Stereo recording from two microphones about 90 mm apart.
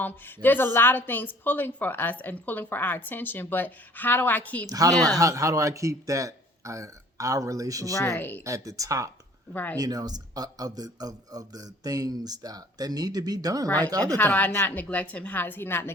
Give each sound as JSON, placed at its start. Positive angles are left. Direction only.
{"t": 0.0, "sound": "a woman's voice", "side_deg": 20}
{"t": 4.6, "sound": "a man's voice", "side_deg": -40}
{"t": 7.9, "sound": "speech", "side_deg": 35}
{"t": 8.2, "sound": "a woman's voice", "side_deg": 20}
{"t": 8.4, "sound": "a man's voice", "side_deg": -40}
{"t": 9.5, "sound": "a woman's voice", "side_deg": 20}
{"t": 9.7, "sound": "a man's voice", "side_deg": -45}
{"t": 14.2, "sound": "a woman's voice", "side_deg": 20}